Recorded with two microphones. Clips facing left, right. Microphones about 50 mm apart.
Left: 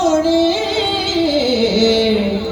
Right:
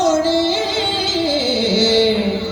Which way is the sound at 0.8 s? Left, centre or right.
Right.